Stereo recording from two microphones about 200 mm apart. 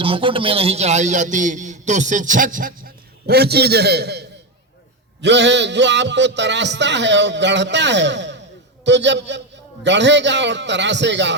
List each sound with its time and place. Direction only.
0.0 s a man's voice: 25° right (ahead or behind); by 11.3 s 60° right (ahead or behind)